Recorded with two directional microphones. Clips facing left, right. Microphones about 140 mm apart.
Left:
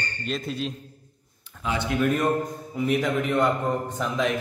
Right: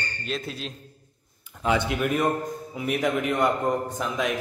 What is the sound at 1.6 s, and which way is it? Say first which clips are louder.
Speech: right 5 dB; 50° right (ahead or behind).